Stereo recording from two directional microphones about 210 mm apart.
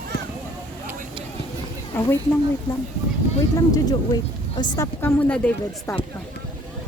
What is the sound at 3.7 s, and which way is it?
Speech, 20° left (ahead or behind).